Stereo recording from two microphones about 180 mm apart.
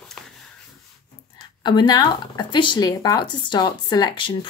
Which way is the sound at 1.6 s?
25° left (ahead or behind).